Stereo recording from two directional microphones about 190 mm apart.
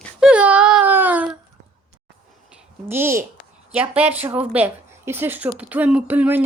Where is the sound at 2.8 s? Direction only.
10° right (ahead or behind).